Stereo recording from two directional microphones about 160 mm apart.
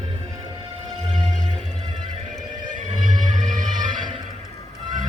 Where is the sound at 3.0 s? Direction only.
50° right (ahead or behind).